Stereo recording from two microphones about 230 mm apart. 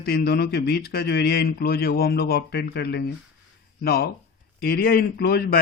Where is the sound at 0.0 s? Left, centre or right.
Left.